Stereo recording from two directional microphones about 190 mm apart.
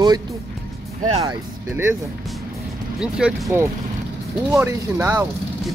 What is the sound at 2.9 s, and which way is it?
Speech, centre (ahead or behind).